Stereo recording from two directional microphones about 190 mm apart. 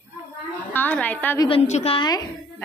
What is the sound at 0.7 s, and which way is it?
Speech, 10° left (ahead or behind).